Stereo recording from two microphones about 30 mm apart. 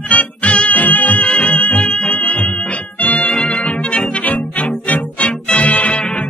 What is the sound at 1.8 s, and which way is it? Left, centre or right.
Music, left.